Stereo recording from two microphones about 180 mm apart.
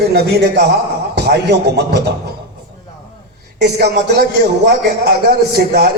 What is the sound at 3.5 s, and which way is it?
A man's voice, 65° right (ahead or behind).